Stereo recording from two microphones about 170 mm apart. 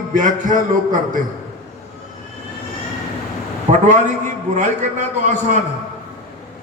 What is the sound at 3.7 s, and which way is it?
A man's voice, 45° right (ahead or behind).